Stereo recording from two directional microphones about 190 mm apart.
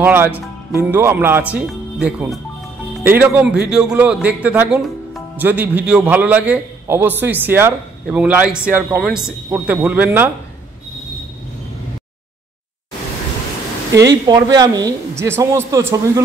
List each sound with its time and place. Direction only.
0.0 s a man's voice: 10° right (ahead or behind)
14.0 s a man's voice: 20° right (ahead or behind)